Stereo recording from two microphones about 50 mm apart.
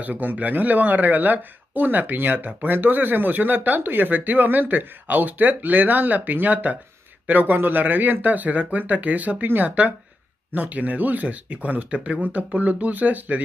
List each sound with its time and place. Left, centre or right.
0.0 s speech: right